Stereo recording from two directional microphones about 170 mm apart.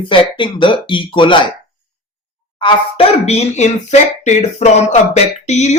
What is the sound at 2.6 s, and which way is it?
Speech, 30° left (ahead or behind).